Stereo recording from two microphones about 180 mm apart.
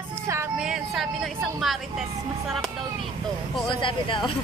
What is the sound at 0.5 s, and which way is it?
A woman's voice, 5° right (ahead or behind).